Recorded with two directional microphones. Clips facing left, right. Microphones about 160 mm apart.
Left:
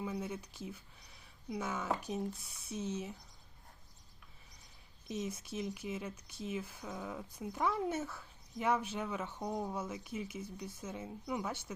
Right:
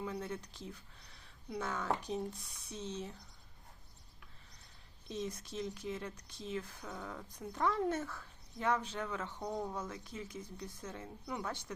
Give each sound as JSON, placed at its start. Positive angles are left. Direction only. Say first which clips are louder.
{"t": 0.0, "sound": "speech", "louder": "left 1 dB", "side_deg": 10}
{"t": 5.0, "sound": "speech", "louder": "left 1 dB", "side_deg": 10}